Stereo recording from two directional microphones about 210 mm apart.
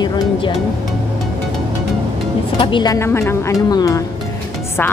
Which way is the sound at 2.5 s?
25° left (ahead or behind).